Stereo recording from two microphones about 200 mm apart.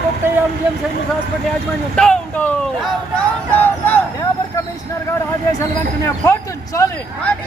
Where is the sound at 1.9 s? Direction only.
5° left (ahead or behind).